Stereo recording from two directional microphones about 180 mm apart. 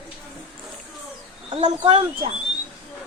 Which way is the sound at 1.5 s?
30° right (ahead or behind).